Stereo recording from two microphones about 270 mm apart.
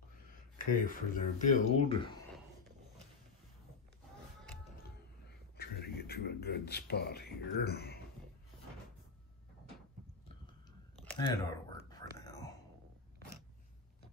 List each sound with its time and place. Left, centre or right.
0.6 s speech: left
5.6 s beatboxing: left
11.1 s whispering: centre